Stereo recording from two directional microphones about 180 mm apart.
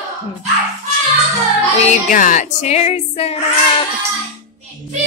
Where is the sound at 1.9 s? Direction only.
45° left (ahead or behind).